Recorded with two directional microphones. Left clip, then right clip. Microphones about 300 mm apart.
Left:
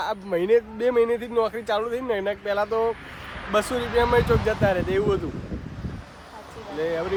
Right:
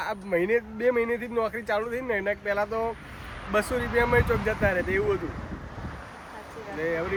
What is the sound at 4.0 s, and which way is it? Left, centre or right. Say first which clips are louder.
Speech: left 4 dB; centre.